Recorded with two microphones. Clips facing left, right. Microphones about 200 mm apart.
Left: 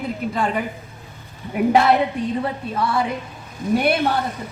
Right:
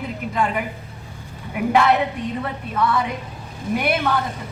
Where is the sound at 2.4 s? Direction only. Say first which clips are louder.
Even; 30° left (ahead or behind).